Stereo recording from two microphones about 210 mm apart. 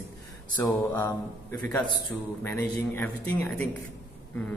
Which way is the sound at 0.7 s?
15° left (ahead or behind).